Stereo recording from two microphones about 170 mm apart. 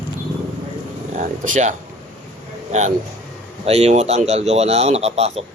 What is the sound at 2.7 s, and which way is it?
Speech, 45° right (ahead or behind).